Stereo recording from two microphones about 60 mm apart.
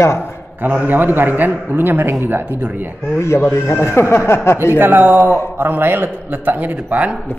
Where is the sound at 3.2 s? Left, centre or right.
Left.